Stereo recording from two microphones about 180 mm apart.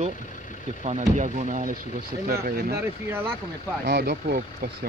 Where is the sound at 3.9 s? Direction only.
60° right (ahead or behind).